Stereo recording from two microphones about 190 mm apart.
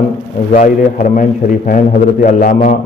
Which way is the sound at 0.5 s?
40° left (ahead or behind).